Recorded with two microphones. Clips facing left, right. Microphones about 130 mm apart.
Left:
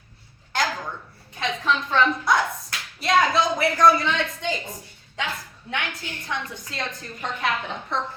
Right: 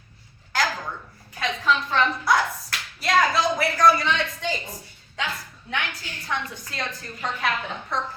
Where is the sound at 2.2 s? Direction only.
25° left (ahead or behind).